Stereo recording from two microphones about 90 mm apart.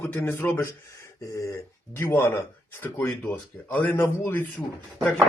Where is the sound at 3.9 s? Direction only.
25° left (ahead or behind).